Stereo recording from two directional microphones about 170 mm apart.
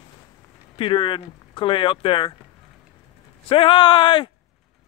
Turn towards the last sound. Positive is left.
turn(degrees=30)  # may be behind; listen again after turning